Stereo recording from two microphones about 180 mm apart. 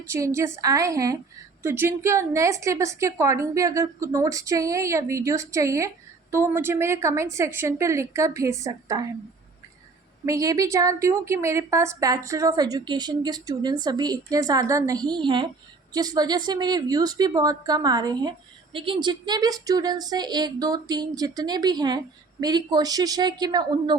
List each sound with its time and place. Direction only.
0.1 s a woman's voice: 15° right (ahead or behind)
10.2 s a woman's voice: 20° right (ahead or behind)